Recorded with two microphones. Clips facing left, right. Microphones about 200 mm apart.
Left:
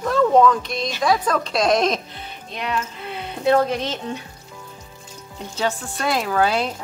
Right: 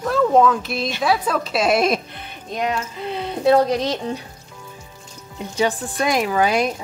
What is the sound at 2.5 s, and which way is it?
Speech, 45° right (ahead or behind).